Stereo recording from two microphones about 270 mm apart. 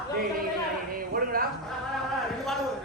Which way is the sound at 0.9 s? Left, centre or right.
Right.